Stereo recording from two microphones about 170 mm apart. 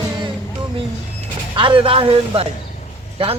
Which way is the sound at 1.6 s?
30° right (ahead or behind).